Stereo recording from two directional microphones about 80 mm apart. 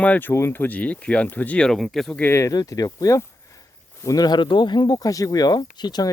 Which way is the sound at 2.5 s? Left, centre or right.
Left.